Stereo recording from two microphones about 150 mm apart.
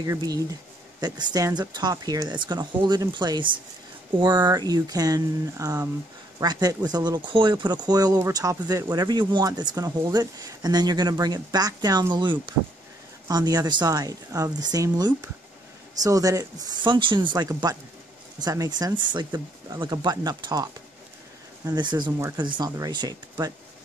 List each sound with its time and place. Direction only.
0.0 s speech: 25° right (ahead or behind)